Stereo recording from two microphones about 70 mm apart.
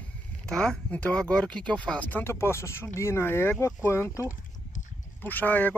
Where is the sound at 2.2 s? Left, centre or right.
Left.